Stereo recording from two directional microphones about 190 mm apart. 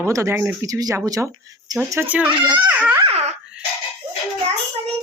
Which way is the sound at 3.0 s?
35° right (ahead or behind).